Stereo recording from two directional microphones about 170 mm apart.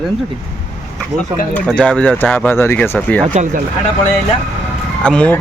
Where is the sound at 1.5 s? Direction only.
5° left (ahead or behind).